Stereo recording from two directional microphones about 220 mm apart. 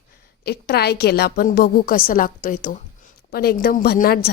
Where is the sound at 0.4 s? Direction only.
50° left (ahead or behind).